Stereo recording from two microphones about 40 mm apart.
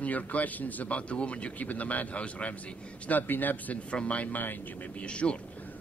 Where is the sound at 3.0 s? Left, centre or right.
Left.